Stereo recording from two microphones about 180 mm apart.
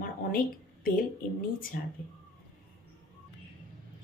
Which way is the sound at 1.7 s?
60° left (ahead or behind).